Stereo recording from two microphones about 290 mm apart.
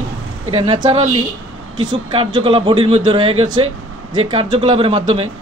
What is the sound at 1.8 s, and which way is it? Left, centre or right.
A man's voice, centre.